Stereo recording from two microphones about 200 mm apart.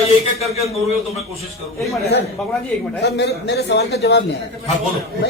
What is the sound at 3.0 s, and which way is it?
A man's voice, 55° left (ahead or behind).